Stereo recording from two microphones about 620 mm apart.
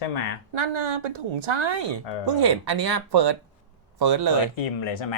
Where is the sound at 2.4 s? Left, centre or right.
Right.